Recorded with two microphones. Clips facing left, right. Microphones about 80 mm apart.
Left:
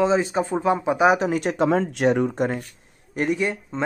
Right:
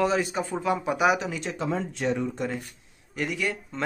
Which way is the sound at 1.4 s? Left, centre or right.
Left.